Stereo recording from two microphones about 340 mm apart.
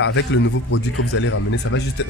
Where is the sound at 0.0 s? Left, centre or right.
Left.